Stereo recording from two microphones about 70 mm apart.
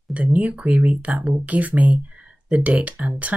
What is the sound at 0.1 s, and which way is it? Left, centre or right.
Speech, right.